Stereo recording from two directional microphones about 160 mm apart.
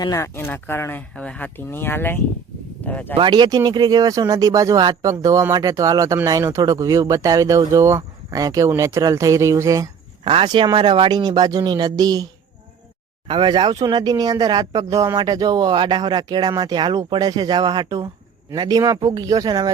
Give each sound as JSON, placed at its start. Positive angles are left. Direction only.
{"t": 0.0, "sound": "speech", "side_deg": 20}
{"t": 3.2, "sound": "speech", "side_deg": -30}
{"t": 10.2, "sound": "speech", "side_deg": -35}